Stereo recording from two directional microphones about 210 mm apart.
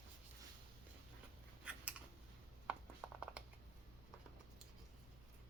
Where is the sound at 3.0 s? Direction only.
Centre (ahead or behind).